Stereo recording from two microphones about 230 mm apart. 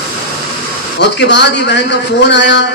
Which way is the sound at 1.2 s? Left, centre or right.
Left.